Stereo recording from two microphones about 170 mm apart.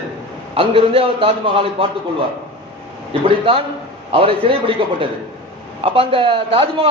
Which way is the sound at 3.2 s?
35° right (ahead or behind).